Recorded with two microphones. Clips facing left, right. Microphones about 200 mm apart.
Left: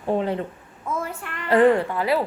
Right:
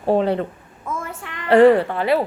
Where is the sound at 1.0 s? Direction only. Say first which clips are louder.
Left 1 dB; 75° right (ahead or behind).